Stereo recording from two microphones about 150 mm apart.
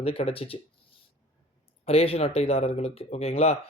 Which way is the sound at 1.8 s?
40° left (ahead or behind).